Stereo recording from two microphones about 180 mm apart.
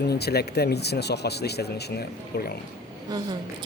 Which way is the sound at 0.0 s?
65° left (ahead or behind).